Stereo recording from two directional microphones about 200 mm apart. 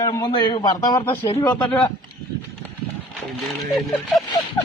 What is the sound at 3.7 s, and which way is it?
Speech, centre (ahead or behind).